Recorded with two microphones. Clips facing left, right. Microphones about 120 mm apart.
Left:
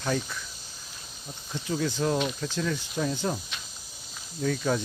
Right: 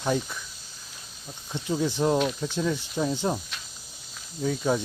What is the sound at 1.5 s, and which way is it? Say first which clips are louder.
Speech: right 2 dB; 20° right (ahead or behind).